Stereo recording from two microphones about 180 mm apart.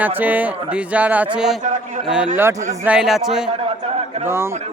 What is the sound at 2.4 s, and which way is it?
A man's voice, 15° right (ahead or behind).